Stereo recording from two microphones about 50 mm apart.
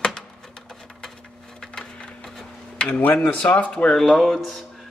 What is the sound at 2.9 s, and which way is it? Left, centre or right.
Speech, left.